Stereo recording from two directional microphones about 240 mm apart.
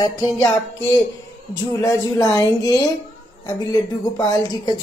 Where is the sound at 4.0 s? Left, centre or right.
Centre.